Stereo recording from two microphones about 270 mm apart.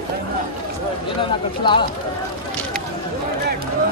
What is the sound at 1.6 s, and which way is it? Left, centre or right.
Speech, centre.